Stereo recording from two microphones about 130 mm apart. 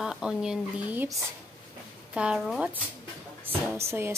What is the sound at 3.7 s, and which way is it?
Music, 20° right (ahead or behind).